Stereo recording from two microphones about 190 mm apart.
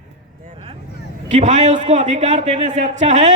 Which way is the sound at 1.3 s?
40° right (ahead or behind).